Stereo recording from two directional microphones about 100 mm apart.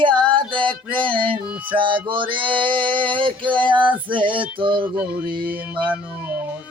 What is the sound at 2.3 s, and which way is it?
Male singing, 55° right (ahead or behind).